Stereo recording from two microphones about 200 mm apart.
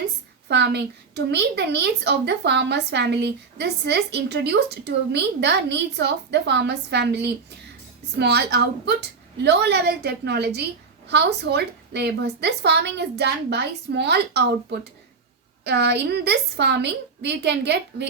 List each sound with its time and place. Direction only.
0.4 s a woman's voice: 60° right (ahead or behind)